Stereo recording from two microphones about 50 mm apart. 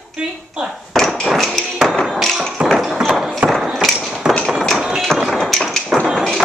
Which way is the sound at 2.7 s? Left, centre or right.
Centre.